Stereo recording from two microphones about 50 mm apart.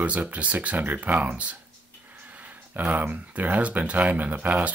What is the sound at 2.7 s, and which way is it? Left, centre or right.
Speech, right.